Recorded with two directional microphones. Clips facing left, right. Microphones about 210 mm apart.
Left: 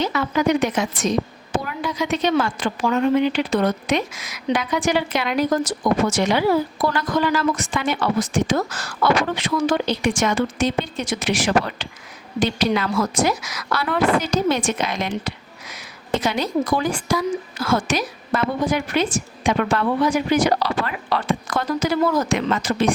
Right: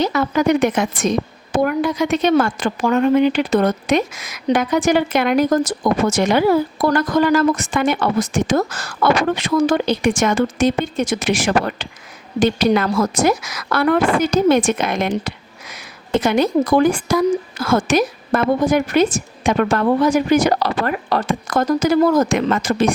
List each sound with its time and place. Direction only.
0.0 s a woman's voice: 40° right (ahead or behind)